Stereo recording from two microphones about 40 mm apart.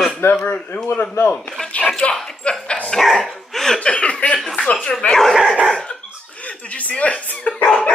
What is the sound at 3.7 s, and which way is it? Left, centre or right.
Speech, left.